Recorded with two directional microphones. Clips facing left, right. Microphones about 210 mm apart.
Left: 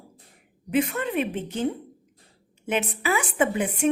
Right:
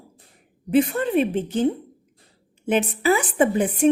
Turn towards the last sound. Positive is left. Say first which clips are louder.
# right 5 dB
turn(degrees=-35)  # may be behind; listen again after turning